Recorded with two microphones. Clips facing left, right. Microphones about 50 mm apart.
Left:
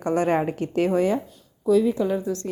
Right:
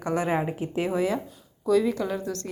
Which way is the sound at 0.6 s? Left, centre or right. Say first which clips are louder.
Left 5 dB; left.